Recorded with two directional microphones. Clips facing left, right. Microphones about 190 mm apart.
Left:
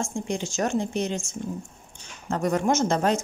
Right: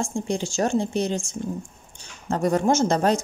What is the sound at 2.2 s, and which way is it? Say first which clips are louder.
Speech: right 3 dB; 35° right (ahead or behind).